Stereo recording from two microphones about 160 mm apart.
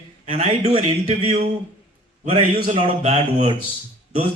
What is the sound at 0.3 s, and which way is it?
Speech, 40° right (ahead or behind).